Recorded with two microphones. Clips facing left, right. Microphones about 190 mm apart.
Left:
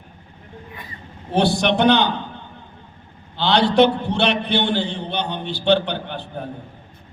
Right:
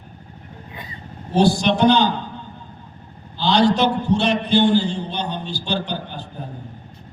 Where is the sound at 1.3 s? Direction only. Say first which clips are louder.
Right 1 dB; 60° left (ahead or behind).